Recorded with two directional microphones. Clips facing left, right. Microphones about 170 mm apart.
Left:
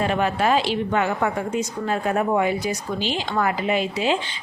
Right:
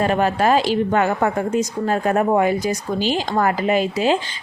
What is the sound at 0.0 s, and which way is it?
A woman's voice, 40° right (ahead or behind).